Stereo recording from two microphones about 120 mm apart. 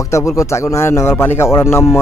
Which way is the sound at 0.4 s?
25° left (ahead or behind).